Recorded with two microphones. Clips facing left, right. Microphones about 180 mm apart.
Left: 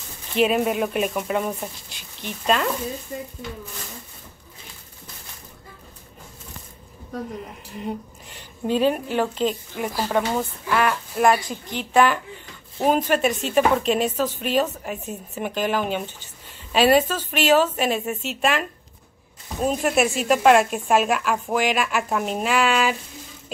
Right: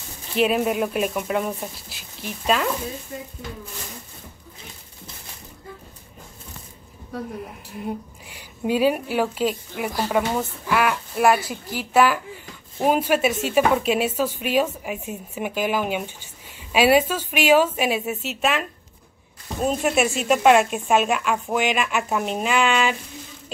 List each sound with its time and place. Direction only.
0.4 s a woman's voice: centre (ahead or behind)
7.4 s a woman's voice: 5° right (ahead or behind)